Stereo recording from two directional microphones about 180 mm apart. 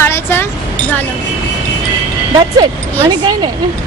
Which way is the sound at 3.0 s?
25° right (ahead or behind).